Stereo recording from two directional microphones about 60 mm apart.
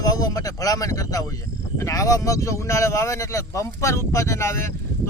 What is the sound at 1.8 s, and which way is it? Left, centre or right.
Speech, left.